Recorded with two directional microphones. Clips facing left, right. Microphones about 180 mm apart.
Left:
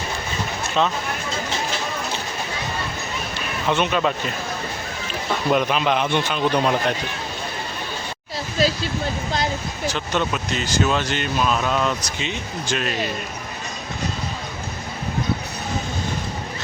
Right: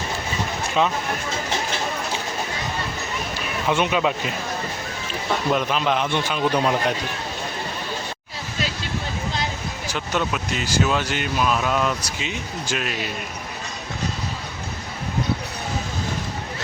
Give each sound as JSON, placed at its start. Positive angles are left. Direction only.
{"t": 0.8, "sound": "speech", "side_deg": -10}
{"t": 3.7, "sound": "speech", "side_deg": -10}
{"t": 5.5, "sound": "a man's voice", "side_deg": 5}
{"t": 8.6, "sound": "a sound", "side_deg": 35}
{"t": 9.9, "sound": "speech", "side_deg": -5}